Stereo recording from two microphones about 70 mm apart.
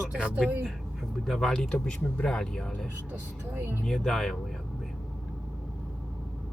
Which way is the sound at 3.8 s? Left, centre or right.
Centre.